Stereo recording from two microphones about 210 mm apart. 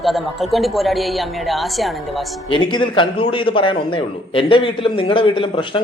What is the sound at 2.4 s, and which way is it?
A man's voice, 25° left (ahead or behind).